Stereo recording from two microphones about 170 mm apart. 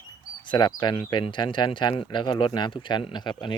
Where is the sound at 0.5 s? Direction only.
25° left (ahead or behind).